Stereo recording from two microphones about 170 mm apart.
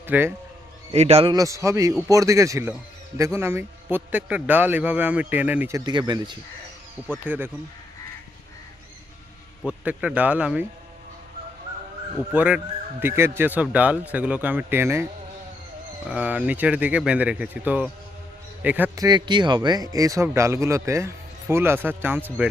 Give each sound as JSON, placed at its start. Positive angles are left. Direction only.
{"t": 0.1, "sound": "speech", "side_deg": -15}
{"t": 0.9, "sound": "speech", "side_deg": -40}
{"t": 1.3, "sound": "a man's voice", "side_deg": -20}
{"t": 7.3, "sound": "speech", "side_deg": -10}
{"t": 9.6, "sound": "speech", "side_deg": -5}
{"t": 12.3, "sound": "speech", "side_deg": -10}
{"t": 16.0, "sound": "speech", "side_deg": -10}
{"t": 18.9, "sound": "speech", "side_deg": -25}